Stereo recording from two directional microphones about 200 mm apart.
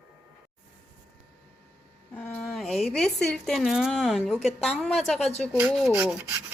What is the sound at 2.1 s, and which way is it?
Speech, 5° left (ahead or behind).